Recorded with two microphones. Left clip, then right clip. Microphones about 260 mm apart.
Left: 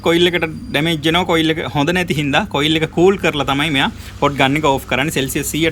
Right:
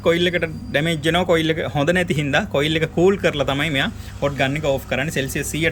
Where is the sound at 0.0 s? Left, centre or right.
Centre.